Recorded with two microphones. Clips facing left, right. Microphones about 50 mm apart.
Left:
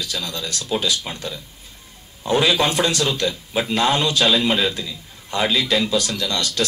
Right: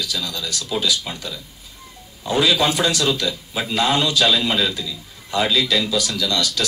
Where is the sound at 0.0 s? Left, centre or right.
Left.